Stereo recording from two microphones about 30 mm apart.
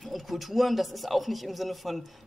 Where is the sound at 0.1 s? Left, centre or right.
Centre.